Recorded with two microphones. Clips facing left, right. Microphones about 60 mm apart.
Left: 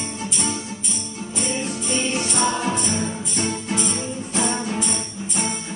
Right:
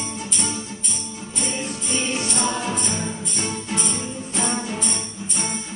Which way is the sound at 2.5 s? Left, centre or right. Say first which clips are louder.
Left 2 dB; left.